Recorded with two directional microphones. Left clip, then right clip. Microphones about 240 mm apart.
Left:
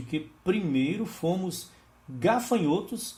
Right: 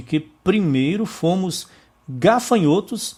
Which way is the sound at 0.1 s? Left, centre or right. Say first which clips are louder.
Right 9 dB; right.